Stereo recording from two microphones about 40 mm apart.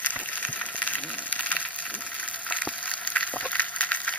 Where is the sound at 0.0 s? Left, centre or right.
Left.